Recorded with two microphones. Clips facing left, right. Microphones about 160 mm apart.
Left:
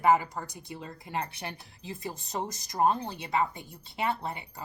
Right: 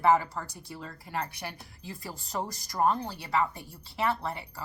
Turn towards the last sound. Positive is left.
turn(degrees=20)  # may be behind; listen again after turning